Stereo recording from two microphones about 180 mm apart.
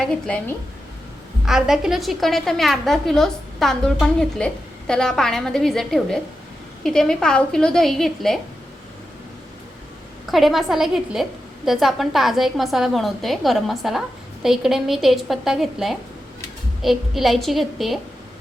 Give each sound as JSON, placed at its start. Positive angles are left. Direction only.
{"t": 0.0, "sound": "a woman's voice", "side_deg": 5}
{"t": 10.3, "sound": "a woman's voice", "side_deg": 0}